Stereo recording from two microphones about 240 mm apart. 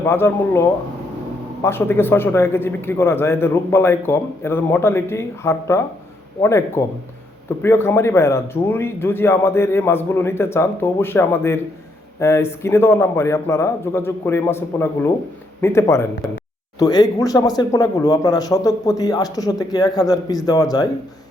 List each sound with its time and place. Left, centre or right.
0.0 s a man's voice: centre